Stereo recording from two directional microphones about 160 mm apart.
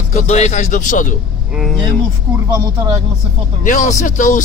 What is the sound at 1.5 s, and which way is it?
Speech, centre (ahead or behind).